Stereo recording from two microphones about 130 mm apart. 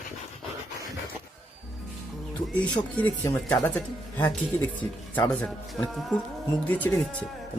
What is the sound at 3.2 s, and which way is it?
Speech, 25° left (ahead or behind).